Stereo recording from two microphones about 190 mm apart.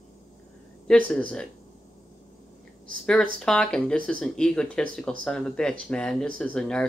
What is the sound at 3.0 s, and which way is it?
Speech, 5° left (ahead or behind).